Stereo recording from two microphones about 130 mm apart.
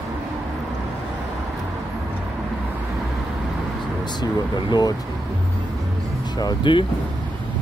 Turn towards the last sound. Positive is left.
turn(degrees=35)  # may be behind; listen again after turning